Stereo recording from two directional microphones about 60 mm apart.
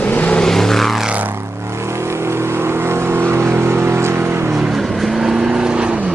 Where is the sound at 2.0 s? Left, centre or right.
Right.